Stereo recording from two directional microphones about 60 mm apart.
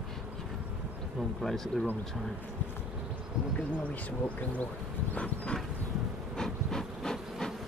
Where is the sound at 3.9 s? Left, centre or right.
Left.